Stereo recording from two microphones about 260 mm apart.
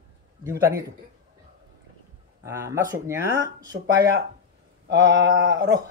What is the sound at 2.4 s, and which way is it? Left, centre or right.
Speech, centre.